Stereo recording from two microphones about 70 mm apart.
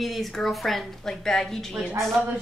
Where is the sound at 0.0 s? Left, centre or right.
Centre.